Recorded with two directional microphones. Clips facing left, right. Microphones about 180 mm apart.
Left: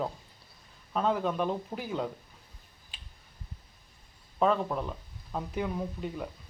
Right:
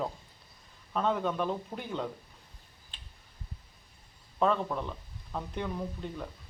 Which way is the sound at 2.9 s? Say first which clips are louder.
Left 1 dB; 10° left (ahead or behind).